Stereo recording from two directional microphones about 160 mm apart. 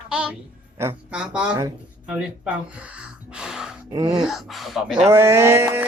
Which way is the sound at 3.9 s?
25° right (ahead or behind).